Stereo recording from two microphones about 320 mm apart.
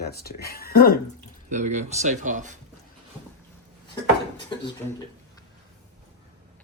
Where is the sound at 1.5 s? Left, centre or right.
Right.